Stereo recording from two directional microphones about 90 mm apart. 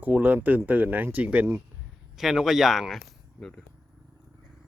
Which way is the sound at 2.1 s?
5° right (ahead or behind).